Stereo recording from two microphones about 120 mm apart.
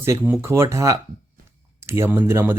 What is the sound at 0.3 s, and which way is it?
Speech, 20° right (ahead or behind).